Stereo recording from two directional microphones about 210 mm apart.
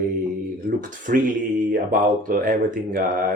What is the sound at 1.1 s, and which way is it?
Speech, 40° right (ahead or behind).